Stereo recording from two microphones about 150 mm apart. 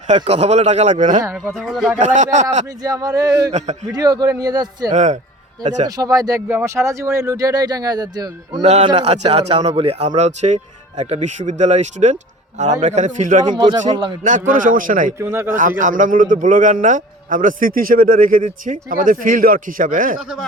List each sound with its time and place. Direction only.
0.3 s speech: 45° right (ahead or behind)
1.2 s speech: 15° right (ahead or behind)
1.5 s speech: centre (ahead or behind)
2.0 s speech: 55° right (ahead or behind)
2.8 s speech: 25° right (ahead or behind)
4.9 s speech: 55° right (ahead or behind)
5.8 s speech: 25° right (ahead or behind)
8.6 s speech: 45° right (ahead or behind)
13.4 s speech: 30° right (ahead or behind)
14.3 s a man's voice: 60° right (ahead or behind)
15.2 s speech: 15° right (ahead or behind)
15.8 s a man's voice: 60° right (ahead or behind)